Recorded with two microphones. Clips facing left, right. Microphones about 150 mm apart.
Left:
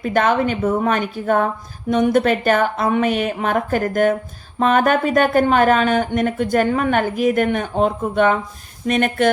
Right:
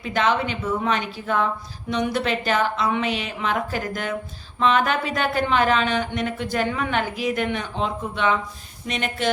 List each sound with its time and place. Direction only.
0.0 s speech: 50° left (ahead or behind)